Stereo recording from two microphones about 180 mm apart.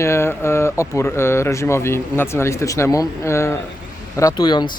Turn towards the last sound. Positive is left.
turn(degrees=25)  # may be behind; listen again after turning